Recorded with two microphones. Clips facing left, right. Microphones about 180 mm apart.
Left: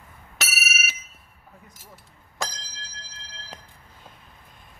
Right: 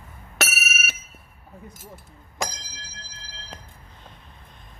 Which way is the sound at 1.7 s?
50° right (ahead or behind).